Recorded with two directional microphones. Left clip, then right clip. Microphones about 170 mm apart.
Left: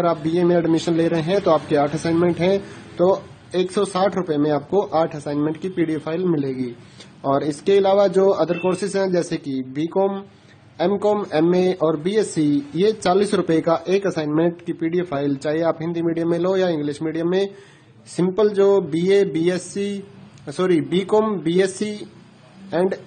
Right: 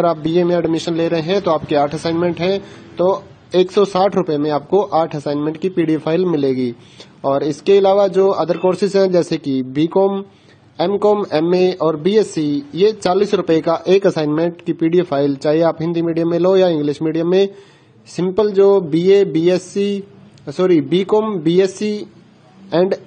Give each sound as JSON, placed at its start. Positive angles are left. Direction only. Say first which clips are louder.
{"t": 0.0, "sound": "speech", "louder": "right 4 dB", "side_deg": -30}
{"t": 7.2, "sound": "speech", "louder": "right 4 dB", "side_deg": -25}